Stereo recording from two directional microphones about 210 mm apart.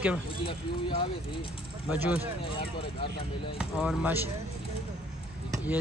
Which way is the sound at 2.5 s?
25° left (ahead or behind).